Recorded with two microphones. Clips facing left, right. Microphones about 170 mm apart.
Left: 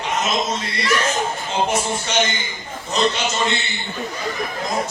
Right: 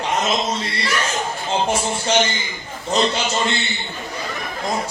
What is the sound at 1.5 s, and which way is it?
A man's voice, 30° right (ahead or behind).